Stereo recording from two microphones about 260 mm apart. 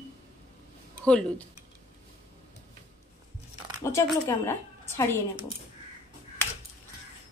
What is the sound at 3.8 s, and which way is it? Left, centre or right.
A woman's voice, centre.